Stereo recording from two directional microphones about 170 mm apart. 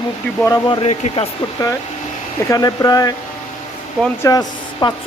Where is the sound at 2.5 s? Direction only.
20° left (ahead or behind).